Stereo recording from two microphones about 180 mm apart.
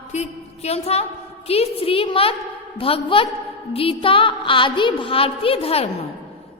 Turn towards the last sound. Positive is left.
turn(degrees=35)  # may be behind; listen again after turning